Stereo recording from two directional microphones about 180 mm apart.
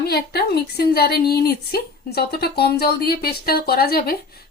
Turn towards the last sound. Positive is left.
turn(degrees=60)  # may be behind; listen again after turning